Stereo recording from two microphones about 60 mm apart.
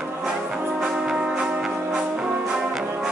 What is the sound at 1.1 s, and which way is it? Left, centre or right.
Music, centre.